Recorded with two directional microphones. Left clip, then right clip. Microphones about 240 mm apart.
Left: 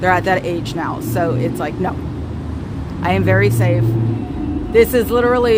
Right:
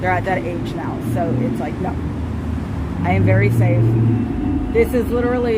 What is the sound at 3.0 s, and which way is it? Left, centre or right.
Speech, left.